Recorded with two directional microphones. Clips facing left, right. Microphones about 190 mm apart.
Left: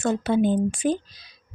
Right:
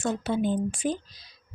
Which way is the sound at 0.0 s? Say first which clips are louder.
Left 5 dB; 65° left (ahead or behind).